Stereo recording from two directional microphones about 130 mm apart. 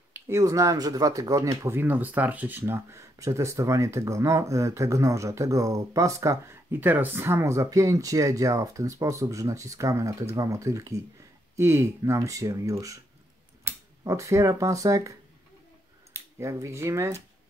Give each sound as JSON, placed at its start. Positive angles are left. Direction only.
{"t": 0.1, "sound": "speech", "side_deg": -25}